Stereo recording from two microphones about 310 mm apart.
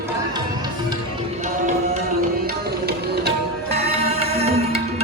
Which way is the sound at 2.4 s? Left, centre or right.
Right.